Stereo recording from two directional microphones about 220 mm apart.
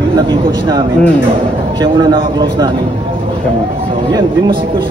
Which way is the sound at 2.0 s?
20° right (ahead or behind).